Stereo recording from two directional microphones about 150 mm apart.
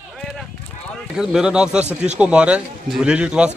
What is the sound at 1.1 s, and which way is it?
A man's voice, 5° right (ahead or behind).